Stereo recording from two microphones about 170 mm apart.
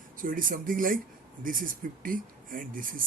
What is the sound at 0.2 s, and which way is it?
Speech, 55° right (ahead or behind).